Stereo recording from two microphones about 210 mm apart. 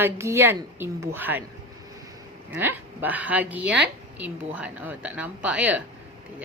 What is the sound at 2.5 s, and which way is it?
A woman's voice, 10° right (ahead or behind).